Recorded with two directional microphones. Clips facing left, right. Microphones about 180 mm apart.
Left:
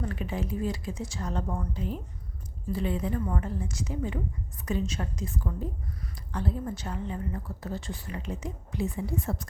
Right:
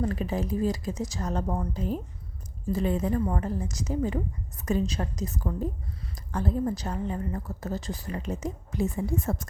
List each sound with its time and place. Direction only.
0.0 s a woman's voice: 40° right (ahead or behind)